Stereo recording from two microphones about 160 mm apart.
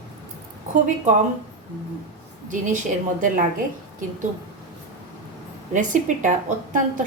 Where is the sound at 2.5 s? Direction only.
55° right (ahead or behind).